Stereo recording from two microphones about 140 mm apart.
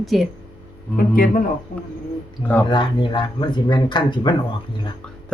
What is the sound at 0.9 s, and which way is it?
Speech, 90° left.